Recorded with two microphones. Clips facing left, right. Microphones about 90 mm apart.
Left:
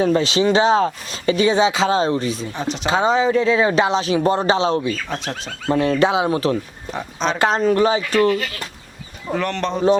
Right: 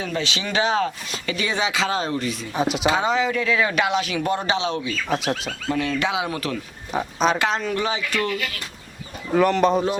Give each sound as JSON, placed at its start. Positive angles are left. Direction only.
{"t": 0.0, "sound": "speech", "side_deg": 35}
{"t": 2.6, "sound": "speech", "side_deg": -10}
{"t": 2.8, "sound": "speech", "side_deg": 30}
{"t": 5.0, "sound": "speech", "side_deg": -5}
{"t": 5.6, "sound": "speech", "side_deg": 35}
{"t": 6.9, "sound": "speech", "side_deg": -5}
{"t": 7.3, "sound": "speech", "side_deg": 40}
{"t": 9.3, "sound": "speech", "side_deg": -5}